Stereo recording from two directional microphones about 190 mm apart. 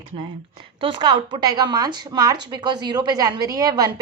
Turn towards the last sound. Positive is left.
turn(degrees=-20)  # may be behind; listen again after turning